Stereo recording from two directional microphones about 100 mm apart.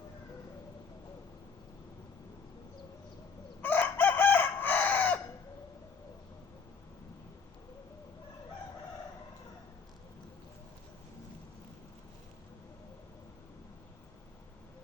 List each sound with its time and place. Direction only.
3.6 s chicken: 15° left (ahead or behind)